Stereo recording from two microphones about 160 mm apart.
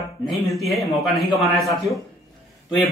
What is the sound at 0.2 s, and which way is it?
Speech, centre (ahead or behind).